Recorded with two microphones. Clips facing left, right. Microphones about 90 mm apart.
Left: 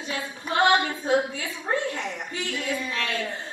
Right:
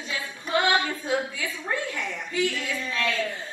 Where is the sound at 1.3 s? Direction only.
30° left (ahead or behind).